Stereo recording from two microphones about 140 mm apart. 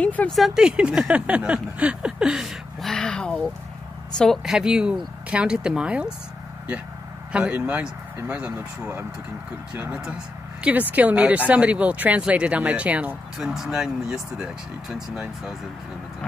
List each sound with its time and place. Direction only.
0.0 s vehicle: 10° left (ahead or behind)
0.4 s speech: 5° right (ahead or behind)
7.3 s speech: 10° right (ahead or behind)